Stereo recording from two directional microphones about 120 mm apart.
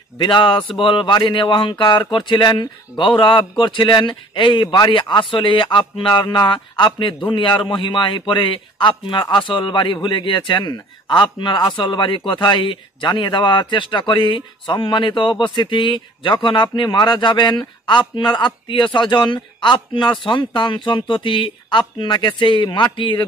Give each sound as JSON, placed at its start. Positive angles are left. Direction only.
{"t": 0.2, "sound": "speech", "side_deg": 45}